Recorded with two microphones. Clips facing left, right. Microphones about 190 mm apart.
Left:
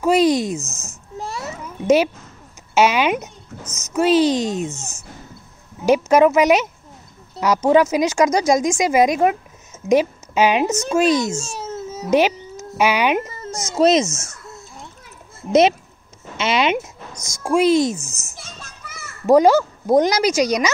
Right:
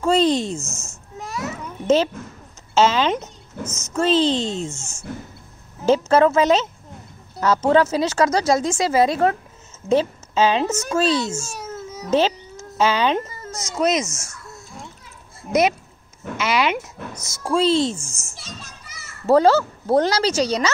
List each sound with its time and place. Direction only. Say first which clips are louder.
0.0 s speech: left 2 dB; 10° left (ahead or behind)
0.7 s babbling: left 4 dB; 35° left (ahead or behind)
2.7 s speech: left 1 dB; 15° left (ahead or behind)
5.9 s speech: left 2 dB; 15° left (ahead or behind)
11.4 s baby cry: left 3 dB; 25° left (ahead or behind)
12.1 s a child's voice: left 2 dB; 15° left (ahead or behind)
16.3 s speech: left 2 dB; 25° left (ahead or behind)
17.5 s speech: left 3 dB; 10° left (ahead or behind)
17.9 s a child's voice: left 3 dB; 10° right (ahead or behind)
18.4 s children playing: even; 50° left (ahead or behind)
19.2 s speech: left 2 dB; 15° left (ahead or behind)